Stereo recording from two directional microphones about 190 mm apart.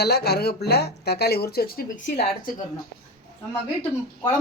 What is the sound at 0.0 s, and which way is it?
Speech, 60° left (ahead or behind).